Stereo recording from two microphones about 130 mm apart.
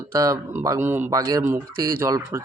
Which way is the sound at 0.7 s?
15° right (ahead or behind).